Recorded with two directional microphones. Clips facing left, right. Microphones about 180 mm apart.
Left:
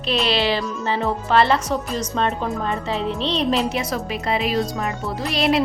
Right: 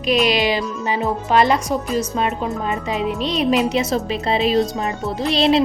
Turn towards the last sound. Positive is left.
turn(degrees=-25)  # may be behind; listen again after turning